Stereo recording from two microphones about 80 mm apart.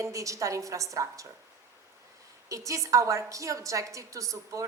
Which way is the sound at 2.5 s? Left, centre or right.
Right.